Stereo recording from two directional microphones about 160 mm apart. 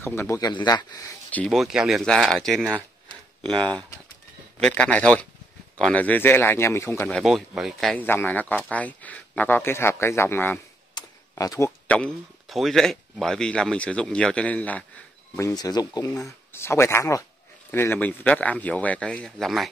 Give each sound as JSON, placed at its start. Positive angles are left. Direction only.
{"t": 0.0, "sound": "speech", "side_deg": 15}
{"t": 1.3, "sound": "speech", "side_deg": 5}
{"t": 4.6, "sound": "speech", "side_deg": 5}
{"t": 7.1, "sound": "speech", "side_deg": 0}
{"t": 8.0, "sound": "speech", "side_deg": 10}
{"t": 11.0, "sound": "computer keyboard", "side_deg": 20}
{"t": 11.9, "sound": "speech", "side_deg": 5}
{"t": 15.3, "sound": "speech", "side_deg": 20}